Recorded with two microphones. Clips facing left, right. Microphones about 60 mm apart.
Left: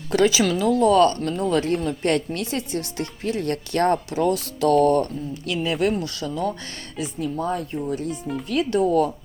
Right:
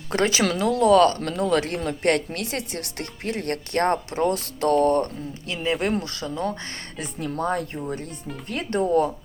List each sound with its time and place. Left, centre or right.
0.1 s speech: right
1.9 s speech: right
4.7 s speech: right
7.0 s speech: right